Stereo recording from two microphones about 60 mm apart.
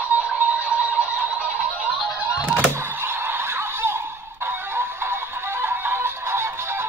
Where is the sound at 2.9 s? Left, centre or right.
Right.